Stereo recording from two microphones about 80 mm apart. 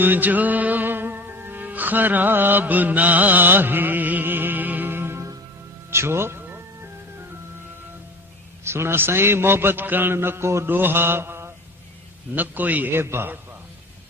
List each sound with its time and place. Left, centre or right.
0.0 s music: right
8.6 s a man's voice: right